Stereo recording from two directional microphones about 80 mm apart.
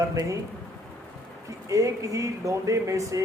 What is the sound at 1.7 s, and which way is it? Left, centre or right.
Speech, right.